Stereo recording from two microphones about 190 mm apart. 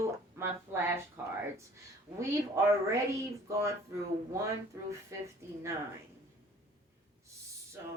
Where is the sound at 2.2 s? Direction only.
15° right (ahead or behind).